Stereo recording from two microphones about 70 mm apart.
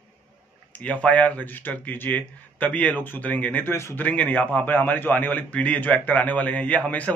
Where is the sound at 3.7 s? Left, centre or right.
Left.